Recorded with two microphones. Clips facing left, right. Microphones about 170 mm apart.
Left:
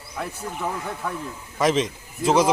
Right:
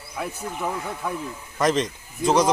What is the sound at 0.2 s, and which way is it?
Speech, 10° right (ahead or behind).